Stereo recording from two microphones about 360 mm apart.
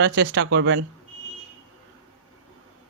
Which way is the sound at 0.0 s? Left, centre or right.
Right.